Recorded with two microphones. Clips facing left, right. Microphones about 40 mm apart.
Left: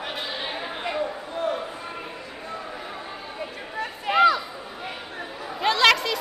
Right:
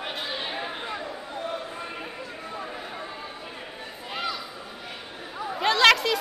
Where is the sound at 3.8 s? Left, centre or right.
Left.